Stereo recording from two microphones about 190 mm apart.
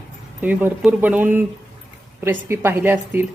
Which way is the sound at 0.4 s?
10° right (ahead or behind).